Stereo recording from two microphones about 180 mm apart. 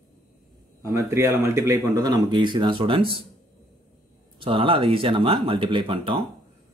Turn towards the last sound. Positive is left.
turn(degrees=-30)  # may be behind; listen again after turning